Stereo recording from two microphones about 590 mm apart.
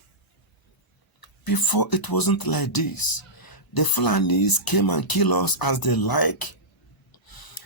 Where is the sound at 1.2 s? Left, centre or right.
Left.